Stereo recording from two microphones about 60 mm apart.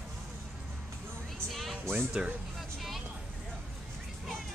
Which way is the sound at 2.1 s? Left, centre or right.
Centre.